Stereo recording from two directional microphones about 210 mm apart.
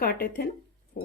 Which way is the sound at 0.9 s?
40° left (ahead or behind).